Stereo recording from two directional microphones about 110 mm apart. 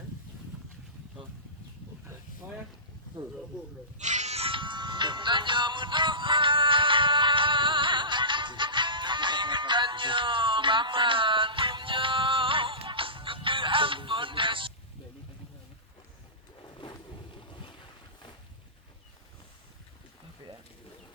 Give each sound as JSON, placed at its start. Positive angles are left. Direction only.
{"t": 3.9, "sound": "music", "side_deg": -90}
{"t": 17.5, "sound": "boat", "side_deg": 50}